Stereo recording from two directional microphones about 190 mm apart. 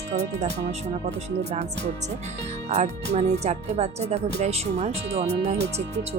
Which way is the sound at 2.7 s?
35° right (ahead or behind).